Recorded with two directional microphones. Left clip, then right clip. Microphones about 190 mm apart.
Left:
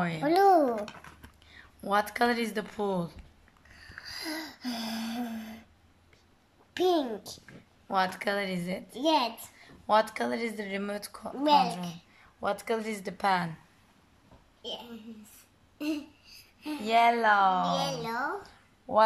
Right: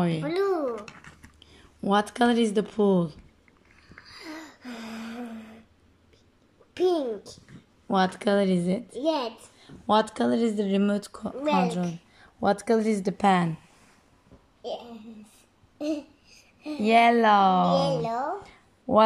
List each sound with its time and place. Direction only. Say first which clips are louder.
0.2 s a child's voice: left 8 dB; 30° left (ahead or behind)
1.5 s a woman's voice: right 4 dB; 10° right (ahead or behind)
4.0 s a sound: left 4 dB; 35° left (ahead or behind)
6.7 s a sound: right 2 dB; 20° left (ahead or behind)
7.9 s speech: right 5 dB; 15° right (ahead or behind)
9.0 s a child's voice: left 1 dB; 15° left (ahead or behind)
9.6 s speech: right 2 dB; 15° right (ahead or behind)
11.4 s speech: left 1 dB; 25° left (ahead or behind)
12.4 s speech: right 7 dB; 15° right (ahead or behind)
15.8 s babbling: right 4 dB; centre (ahead or behind)
16.8 s speech: right 4 dB; 15° right (ahead or behind)
17.7 s speech: right 6 dB; centre (ahead or behind)
18.4 s a sound: right 4 dB; 15° right (ahead or behind)